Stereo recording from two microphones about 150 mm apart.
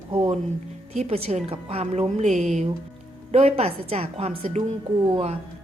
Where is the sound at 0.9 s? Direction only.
40° right (ahead or behind).